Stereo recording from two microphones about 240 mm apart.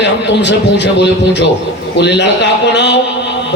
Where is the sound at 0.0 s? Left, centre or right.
Left.